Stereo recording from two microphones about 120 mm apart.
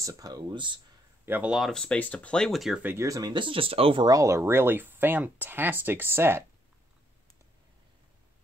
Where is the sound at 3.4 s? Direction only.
50° right (ahead or behind).